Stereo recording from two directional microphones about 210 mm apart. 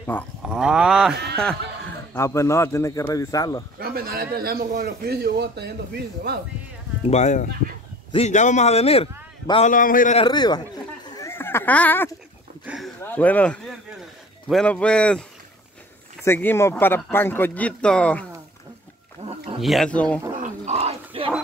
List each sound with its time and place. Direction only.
0.1 s speech: 10° left (ahead or behind)
0.5 s speech: 5° right (ahead or behind)
1.1 s a man's voice: 50° right (ahead or behind)
2.1 s speech: 15° left (ahead or behind)
3.8 s a man's voice: 45° right (ahead or behind)
7.1 s a man's voice: 35° left (ahead or behind)
10.2 s a man's voice: 20° left (ahead or behind)
11.1 s a sound: 15° left (ahead or behind); by 12.9 s centre (ahead or behind)
13.0 s speech: 10° left (ahead or behind)
16.3 s speech: 10° left (ahead or behind)
19.2 s wild animals: 25° right (ahead or behind)
19.6 s speech: centre (ahead or behind)
20.4 s a sound: 30° right (ahead or behind)